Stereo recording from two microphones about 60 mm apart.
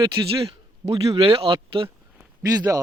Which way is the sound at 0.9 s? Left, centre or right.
Right.